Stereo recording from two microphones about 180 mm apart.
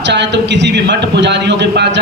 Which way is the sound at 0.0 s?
75° right (ahead or behind).